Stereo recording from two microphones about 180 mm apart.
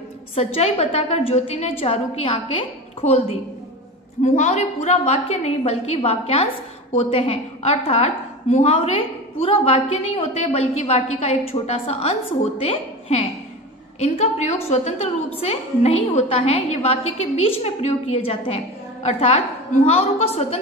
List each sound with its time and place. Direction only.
0.6 s a woman's voice: 30° left (ahead or behind)